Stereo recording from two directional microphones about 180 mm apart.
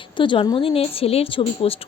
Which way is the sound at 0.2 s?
25° left (ahead or behind).